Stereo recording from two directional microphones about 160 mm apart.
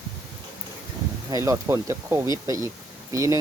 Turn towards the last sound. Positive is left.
turn(degrees=-20)  # may be behind; listen again after turning